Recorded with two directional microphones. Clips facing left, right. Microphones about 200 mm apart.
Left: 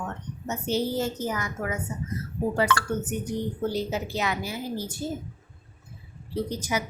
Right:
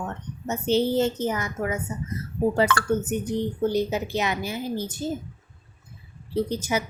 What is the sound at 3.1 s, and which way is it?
A woman's voice, 25° right (ahead or behind).